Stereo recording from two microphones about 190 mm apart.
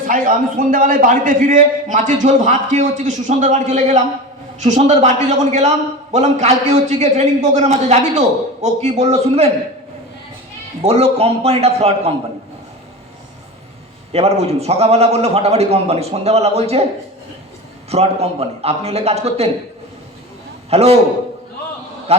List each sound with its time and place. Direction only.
0.0 s a man's voice: 45° right (ahead or behind)
10.8 s a man's voice: 30° right (ahead or behind)
14.1 s a man's voice: 35° right (ahead or behind)
17.8 s a man's voice: 35° right (ahead or behind)
20.7 s a man's voice: 35° right (ahead or behind)